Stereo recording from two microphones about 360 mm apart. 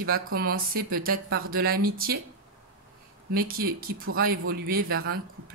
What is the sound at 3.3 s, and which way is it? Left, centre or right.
Speech, right.